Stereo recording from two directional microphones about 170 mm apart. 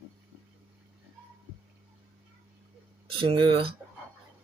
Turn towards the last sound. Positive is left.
turn(degrees=-30)  # may be behind; listen again after turning